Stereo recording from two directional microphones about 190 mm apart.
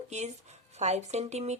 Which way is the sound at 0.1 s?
35° right (ahead or behind).